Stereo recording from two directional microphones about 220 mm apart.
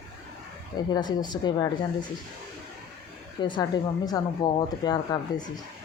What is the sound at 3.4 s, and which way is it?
Speech, 20° left (ahead or behind).